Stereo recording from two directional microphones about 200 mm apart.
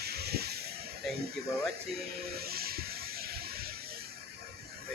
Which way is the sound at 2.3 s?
50° right (ahead or behind).